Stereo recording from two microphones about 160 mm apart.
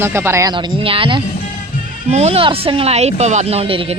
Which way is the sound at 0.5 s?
30° right (ahead or behind).